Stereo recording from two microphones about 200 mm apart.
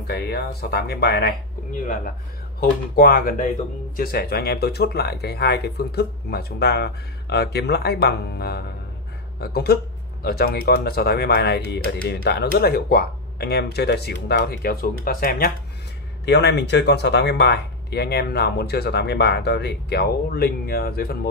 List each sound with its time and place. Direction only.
0.0 s speech: 55° left (ahead or behind)
3.0 s speech: 45° left (ahead or behind)